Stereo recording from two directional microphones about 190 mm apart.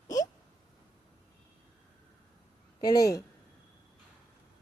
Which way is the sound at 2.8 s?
20° left (ahead or behind).